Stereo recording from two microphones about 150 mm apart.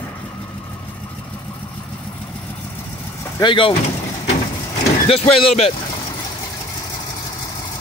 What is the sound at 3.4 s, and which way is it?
Speech, 35° left (ahead or behind).